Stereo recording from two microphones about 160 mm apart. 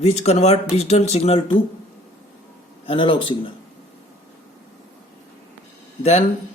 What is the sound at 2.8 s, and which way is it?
Speech, 35° left (ahead or behind).